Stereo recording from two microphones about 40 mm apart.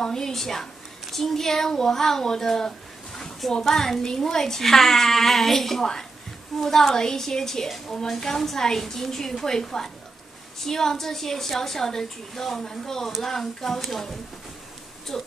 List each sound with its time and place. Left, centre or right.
0.0 s a woman's voice: centre
15.1 s a woman's voice: centre